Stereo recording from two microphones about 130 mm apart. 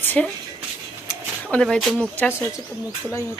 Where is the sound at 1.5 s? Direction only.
5° left (ahead or behind).